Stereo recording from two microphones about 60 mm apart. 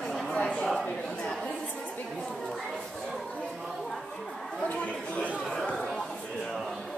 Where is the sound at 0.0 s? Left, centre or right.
Centre.